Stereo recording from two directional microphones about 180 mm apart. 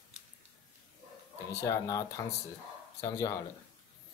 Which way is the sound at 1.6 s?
20° left (ahead or behind).